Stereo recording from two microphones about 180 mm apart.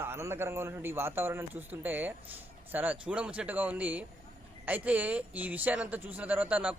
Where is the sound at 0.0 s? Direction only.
15° right (ahead or behind).